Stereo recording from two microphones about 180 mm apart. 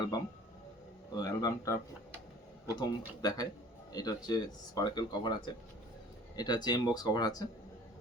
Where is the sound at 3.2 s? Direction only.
20° left (ahead or behind).